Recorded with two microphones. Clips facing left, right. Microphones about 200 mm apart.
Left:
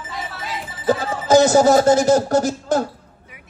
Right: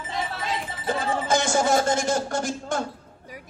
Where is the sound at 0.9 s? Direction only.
40° left (ahead or behind).